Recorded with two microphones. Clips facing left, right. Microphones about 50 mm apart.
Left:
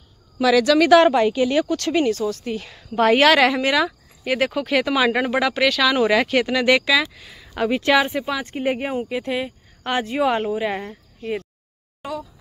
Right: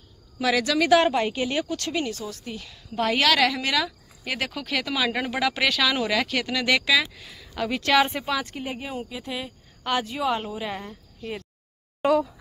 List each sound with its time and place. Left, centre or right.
0.7 s speech: left
5.5 s speech: centre
5.9 s speech: left
6.8 s speech: centre
7.5 s speech: left
7.9 s speech: centre
8.3 s speech: left
8.6 s speech: left
8.9 s speech: left
12.0 s a sound: right